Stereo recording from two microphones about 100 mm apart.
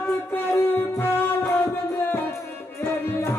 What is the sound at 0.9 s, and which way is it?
Music, 20° left (ahead or behind).